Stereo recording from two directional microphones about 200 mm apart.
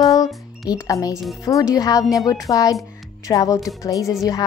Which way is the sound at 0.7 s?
15° left (ahead or behind).